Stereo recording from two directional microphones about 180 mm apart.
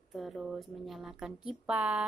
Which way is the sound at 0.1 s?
Centre (ahead or behind).